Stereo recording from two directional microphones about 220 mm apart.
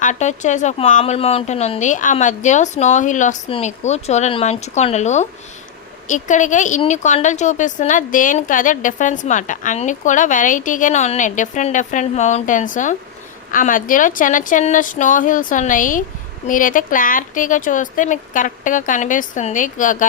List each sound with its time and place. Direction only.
0.0 s a woman's voice: 35° left (ahead or behind)